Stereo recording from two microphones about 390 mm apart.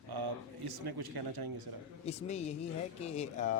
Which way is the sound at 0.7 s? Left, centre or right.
Right.